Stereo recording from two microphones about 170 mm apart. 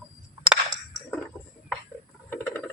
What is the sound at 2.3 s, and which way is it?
Patter, 15° left (ahead or behind).